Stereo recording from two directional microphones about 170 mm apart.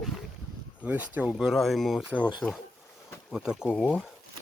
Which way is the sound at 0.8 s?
10° right (ahead or behind).